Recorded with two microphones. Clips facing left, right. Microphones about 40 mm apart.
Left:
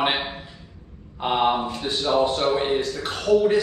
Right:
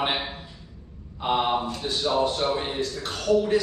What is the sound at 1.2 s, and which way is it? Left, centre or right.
A man's voice, left.